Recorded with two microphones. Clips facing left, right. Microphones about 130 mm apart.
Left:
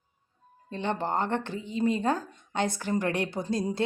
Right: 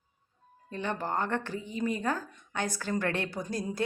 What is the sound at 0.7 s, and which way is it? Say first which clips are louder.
Speech: left 3 dB; 25° left (ahead or behind).